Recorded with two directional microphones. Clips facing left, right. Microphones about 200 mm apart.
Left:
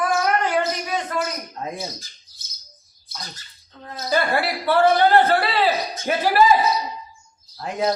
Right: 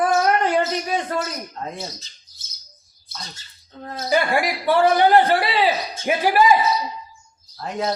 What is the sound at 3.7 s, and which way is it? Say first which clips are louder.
Speech: right 4 dB; 45° right (ahead or behind).